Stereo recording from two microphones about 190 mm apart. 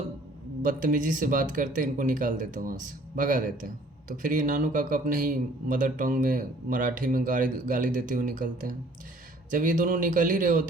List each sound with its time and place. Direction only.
0.6 s speech: 45° right (ahead or behind)